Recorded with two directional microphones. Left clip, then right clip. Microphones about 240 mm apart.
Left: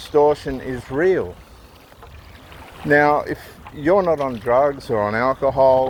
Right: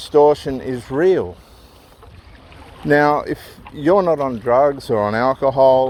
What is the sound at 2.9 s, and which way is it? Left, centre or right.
Speech, right.